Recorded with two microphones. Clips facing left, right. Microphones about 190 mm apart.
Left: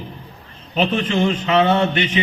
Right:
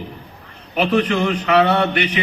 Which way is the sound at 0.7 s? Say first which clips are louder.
Right 2 dB; 25° left (ahead or behind).